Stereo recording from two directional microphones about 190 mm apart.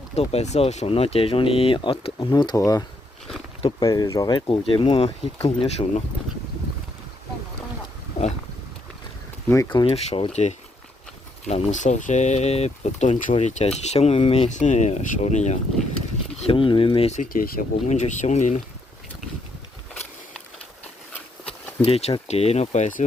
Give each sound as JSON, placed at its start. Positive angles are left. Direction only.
{"t": 0.2, "sound": "speech", "side_deg": 35}
{"t": 9.5, "sound": "speech", "side_deg": 20}
{"t": 21.4, "sound": "speech", "side_deg": 30}